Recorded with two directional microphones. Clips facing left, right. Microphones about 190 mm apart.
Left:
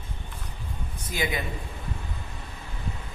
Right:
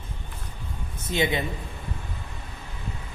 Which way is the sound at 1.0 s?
25° right (ahead or behind).